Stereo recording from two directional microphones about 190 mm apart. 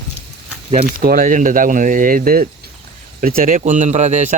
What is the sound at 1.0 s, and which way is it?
Speech, 50° right (ahead or behind).